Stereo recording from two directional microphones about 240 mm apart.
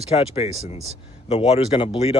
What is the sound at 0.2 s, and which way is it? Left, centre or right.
Speech, left.